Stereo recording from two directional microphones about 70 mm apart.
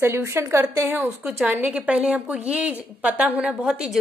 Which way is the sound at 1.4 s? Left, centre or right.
Right.